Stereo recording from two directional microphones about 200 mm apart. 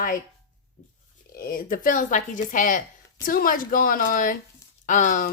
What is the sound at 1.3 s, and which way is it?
Speech, 45° left (ahead or behind).